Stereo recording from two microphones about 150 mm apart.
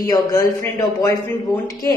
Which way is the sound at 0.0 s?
25° left (ahead or behind).